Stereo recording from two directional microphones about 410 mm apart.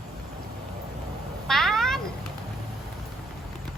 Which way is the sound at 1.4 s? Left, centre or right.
Centre.